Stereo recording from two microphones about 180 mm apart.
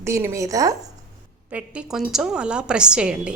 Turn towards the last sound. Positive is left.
turn(degrees=-5)  # may be behind; listen again after turning